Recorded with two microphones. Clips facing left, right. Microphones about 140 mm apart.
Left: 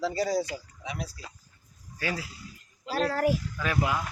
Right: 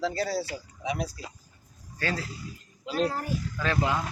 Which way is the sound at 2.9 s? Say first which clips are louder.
Left 3 dB; 90° left.